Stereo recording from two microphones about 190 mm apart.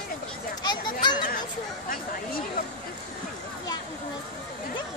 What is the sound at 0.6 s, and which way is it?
Children playing, 20° left (ahead or behind).